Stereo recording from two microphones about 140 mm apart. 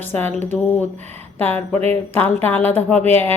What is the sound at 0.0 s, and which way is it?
Speech, 15° left (ahead or behind).